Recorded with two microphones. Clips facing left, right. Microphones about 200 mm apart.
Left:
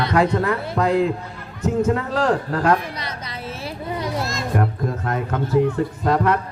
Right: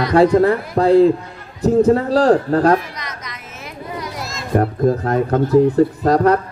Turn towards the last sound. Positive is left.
turn(degrees=-40)  # may be behind; listen again after turning